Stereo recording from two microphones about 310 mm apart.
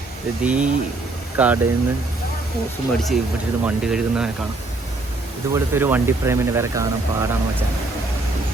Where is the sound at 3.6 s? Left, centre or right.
Centre.